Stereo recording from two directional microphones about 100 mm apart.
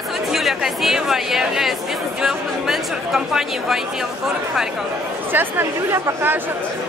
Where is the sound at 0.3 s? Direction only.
5° right (ahead or behind).